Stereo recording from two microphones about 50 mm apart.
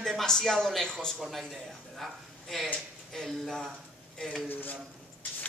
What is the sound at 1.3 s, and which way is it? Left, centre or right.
Speech, centre.